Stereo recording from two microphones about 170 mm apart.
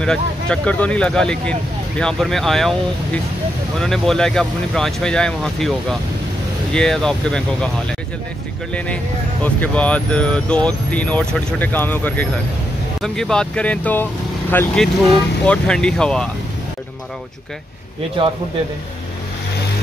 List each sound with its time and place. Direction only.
0.0 s speech: 5° left (ahead or behind)
3.8 s speech: centre (ahead or behind)
8.7 s speech: 5° left (ahead or behind)
18.2 s a man's voice: 30° right (ahead or behind)